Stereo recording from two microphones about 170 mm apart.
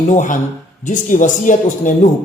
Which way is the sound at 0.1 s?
45° left (ahead or behind).